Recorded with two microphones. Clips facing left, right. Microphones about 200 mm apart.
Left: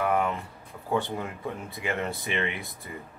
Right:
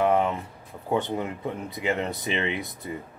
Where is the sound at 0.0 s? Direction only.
25° right (ahead or behind).